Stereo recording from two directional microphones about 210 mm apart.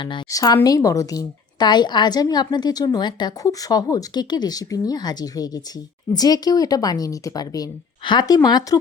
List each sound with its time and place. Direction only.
0.0 s a woman's voice: 20° left (ahead or behind)